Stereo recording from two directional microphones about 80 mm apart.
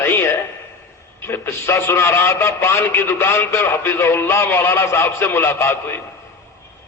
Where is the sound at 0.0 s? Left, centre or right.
Left.